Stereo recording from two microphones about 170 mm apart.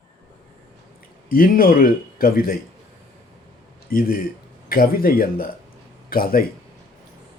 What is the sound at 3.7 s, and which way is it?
Speech, 60° left (ahead or behind).